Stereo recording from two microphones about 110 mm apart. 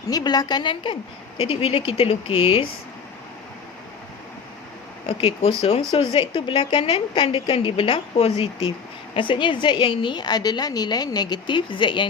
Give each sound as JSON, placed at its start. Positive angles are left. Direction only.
{"t": 0.1, "sound": "a woman's voice", "side_deg": 35}
{"t": 1.4, "sound": "speech", "side_deg": 60}
{"t": 5.0, "sound": "speech", "side_deg": 55}